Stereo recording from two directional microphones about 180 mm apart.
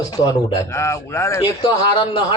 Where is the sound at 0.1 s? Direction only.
20° left (ahead or behind).